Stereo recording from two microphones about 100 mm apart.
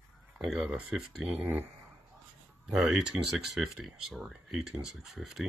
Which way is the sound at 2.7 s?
Centre (ahead or behind).